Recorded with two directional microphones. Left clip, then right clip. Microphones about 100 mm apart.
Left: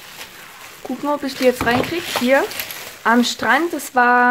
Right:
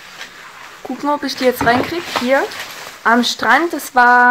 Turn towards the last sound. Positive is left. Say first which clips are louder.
# right 4 dB
turn(degrees=0)  # may be behind; listen again after turning